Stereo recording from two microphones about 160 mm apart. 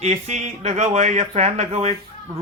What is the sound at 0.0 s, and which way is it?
A man's voice, 45° right (ahead or behind).